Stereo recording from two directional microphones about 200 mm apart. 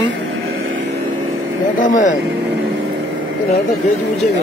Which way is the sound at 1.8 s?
40° left (ahead or behind).